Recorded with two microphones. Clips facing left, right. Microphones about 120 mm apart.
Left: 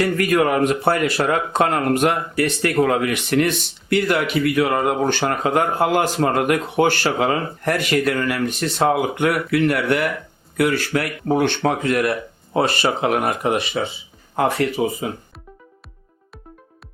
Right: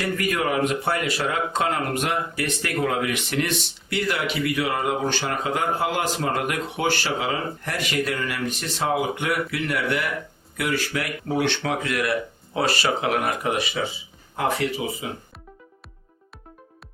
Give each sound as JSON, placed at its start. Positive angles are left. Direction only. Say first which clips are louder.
{"t": 0.0, "sound": "speech", "louder": "left 7 dB", "side_deg": 55}
{"t": 10.6, "sound": "speech", "louder": "left 7 dB", "side_deg": 45}
{"t": 13.1, "sound": "speech", "louder": "left 4 dB", "side_deg": 30}
{"t": 14.8, "sound": "speech", "louder": "left 8 dB", "side_deg": 45}